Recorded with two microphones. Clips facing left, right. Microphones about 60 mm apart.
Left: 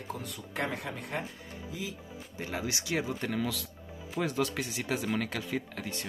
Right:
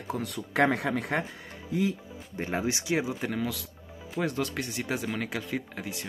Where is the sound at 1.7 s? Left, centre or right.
Right.